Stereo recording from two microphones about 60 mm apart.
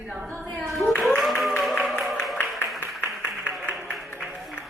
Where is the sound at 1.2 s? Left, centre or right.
Centre.